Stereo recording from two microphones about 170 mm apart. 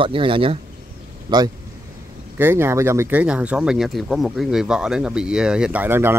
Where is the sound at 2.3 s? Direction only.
15° right (ahead or behind).